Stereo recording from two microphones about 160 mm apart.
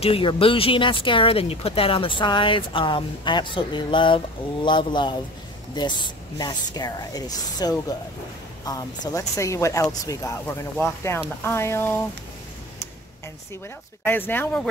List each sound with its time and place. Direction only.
0.0 s speech: 35° left (ahead or behind); by 12.0 s 15° left (ahead or behind)
14.0 s speech: 10° left (ahead or behind)